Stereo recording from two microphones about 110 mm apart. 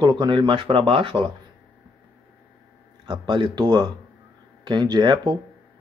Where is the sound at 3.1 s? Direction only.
45° right (ahead or behind).